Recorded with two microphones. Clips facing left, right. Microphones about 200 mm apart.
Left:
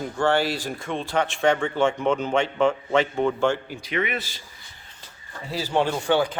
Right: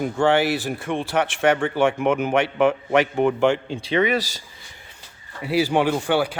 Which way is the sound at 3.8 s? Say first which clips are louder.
Right 7 dB; 30° right (ahead or behind).